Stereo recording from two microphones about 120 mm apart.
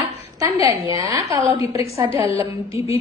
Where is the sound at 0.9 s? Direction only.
30° right (ahead or behind).